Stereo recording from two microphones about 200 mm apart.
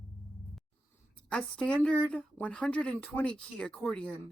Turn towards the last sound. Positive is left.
turn(degrees=5)  # may be behind; listen again after turning